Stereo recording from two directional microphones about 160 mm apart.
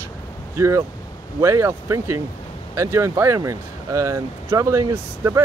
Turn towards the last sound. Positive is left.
turn(degrees=-20)  # may be behind; listen again after turning